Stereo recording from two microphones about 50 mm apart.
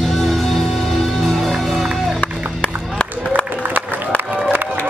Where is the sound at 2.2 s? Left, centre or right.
Left.